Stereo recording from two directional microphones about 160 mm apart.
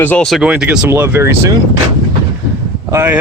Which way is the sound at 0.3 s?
5° right (ahead or behind).